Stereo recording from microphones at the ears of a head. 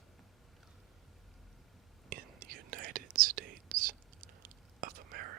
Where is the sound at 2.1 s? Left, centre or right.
Right.